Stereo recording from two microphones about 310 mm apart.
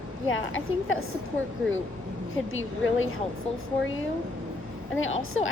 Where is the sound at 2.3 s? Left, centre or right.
Left.